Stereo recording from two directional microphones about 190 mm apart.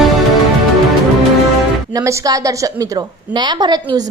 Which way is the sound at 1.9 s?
15° right (ahead or behind).